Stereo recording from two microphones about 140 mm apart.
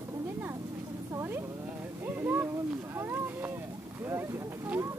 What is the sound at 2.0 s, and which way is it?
Boat, 15° right (ahead or behind).